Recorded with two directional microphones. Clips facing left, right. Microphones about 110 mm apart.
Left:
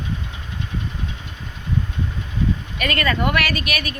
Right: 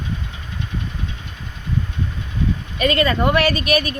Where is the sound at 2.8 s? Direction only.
25° right (ahead or behind).